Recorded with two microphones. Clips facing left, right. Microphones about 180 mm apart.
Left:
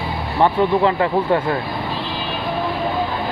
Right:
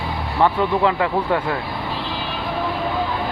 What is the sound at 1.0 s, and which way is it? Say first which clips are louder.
Speech: left 3 dB; 40° left (ahead or behind).